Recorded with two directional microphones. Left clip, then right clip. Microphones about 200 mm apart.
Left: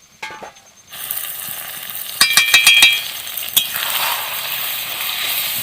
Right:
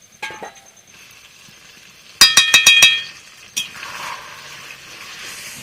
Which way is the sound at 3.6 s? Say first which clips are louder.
Left 7 dB; 25° left (ahead or behind).